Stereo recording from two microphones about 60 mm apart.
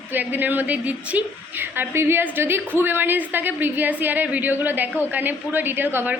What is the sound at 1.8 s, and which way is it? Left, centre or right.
A woman's voice, right.